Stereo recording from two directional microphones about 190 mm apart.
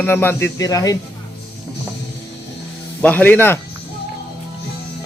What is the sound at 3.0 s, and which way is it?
Speech, 10° left (ahead or behind).